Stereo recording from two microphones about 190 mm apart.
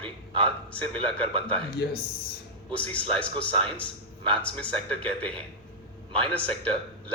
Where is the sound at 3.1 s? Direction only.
5° left (ahead or behind).